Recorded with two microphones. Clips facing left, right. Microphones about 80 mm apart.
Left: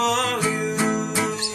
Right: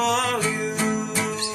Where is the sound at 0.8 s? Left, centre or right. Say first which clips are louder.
Left 2 dB; centre.